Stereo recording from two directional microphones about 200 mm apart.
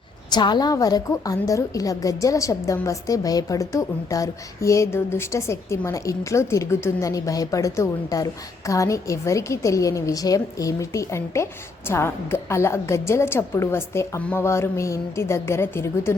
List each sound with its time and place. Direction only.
0.3 s a woman's voice: 20° left (ahead or behind)